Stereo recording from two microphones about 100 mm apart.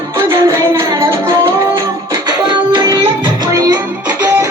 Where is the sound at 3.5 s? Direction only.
40° right (ahead or behind).